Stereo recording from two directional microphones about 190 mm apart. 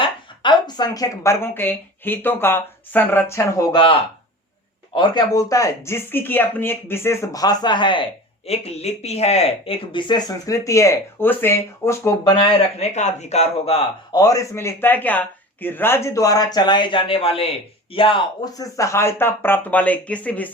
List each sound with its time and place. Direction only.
0.0 s a woman's voice: 25° left (ahead or behind)
4.9 s speech: 20° left (ahead or behind)
12.4 s speech: 30° left (ahead or behind)
14.1 s speech: 20° left (ahead or behind)